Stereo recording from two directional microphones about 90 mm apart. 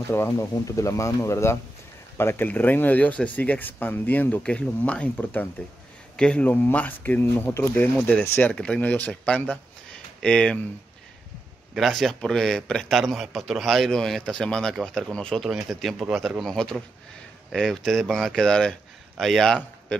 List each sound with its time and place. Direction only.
0.1 s speech: 30° left (ahead or behind); by 10.6 s 10° left (ahead or behind)
11.7 s a man's voice: centre (ahead or behind)
15.4 s a man's voice: centre (ahead or behind)